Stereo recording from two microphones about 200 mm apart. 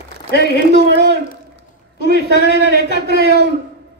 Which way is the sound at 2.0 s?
50° right (ahead or behind).